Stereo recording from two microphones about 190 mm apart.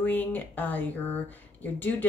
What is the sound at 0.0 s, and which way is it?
Speech, 10° left (ahead or behind).